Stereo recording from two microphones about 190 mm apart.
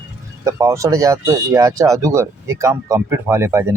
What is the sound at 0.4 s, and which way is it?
Speech, 15° right (ahead or behind).